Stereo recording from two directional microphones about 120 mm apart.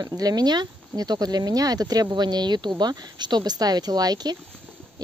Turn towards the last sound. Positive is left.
turn(degrees=-35)  # may be behind; listen again after turning